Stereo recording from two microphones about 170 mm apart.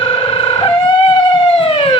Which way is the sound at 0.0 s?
35° left (ahead or behind).